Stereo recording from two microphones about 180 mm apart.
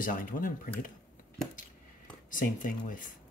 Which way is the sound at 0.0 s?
50° left (ahead or behind).